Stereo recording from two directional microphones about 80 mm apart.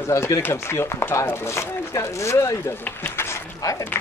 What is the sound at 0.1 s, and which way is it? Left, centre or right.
Speech, left.